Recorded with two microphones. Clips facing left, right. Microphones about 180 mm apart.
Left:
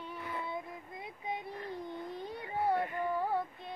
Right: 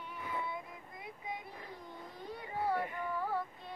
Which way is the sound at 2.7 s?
20° left (ahead or behind).